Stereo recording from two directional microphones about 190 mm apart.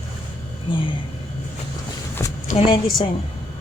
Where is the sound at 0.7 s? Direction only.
25° left (ahead or behind).